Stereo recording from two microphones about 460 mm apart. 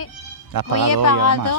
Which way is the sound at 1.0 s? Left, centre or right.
Left.